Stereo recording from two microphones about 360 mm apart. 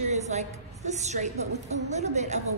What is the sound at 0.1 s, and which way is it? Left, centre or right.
A woman's voice, centre.